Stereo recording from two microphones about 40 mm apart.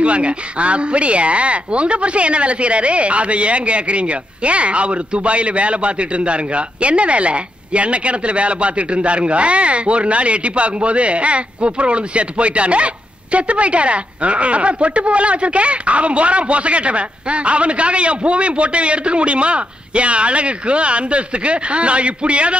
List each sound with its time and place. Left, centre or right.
0.0 s speech: right